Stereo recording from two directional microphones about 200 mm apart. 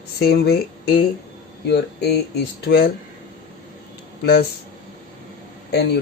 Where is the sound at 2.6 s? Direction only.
55° left (ahead or behind).